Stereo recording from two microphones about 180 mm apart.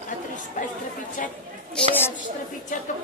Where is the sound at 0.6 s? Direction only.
45° left (ahead or behind).